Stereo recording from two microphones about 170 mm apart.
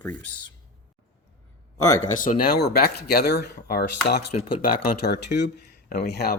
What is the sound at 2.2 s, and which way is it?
Speech, 60° left (ahead or behind).